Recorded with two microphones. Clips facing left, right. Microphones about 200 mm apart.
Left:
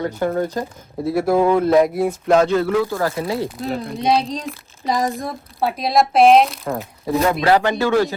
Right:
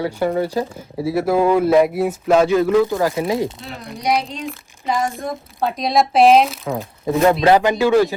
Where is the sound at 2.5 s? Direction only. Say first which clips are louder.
Right 3 dB; 15° right (ahead or behind).